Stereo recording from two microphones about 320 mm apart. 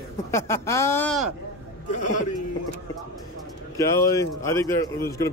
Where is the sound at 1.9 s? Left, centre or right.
Left.